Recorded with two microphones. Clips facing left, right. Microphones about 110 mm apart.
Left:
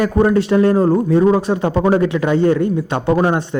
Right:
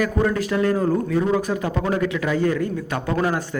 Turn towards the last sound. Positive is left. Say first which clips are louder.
# left 7 dB
turn(degrees=25)  # may be behind; listen again after turning